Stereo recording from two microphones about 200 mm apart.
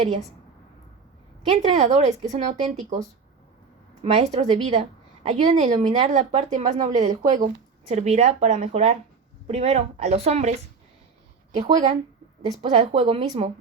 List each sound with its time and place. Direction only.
1.5 s a woman's voice: 35° right (ahead or behind)
4.0 s a woman's voice: 35° right (ahead or behind)
11.5 s a woman's voice: 35° right (ahead or behind)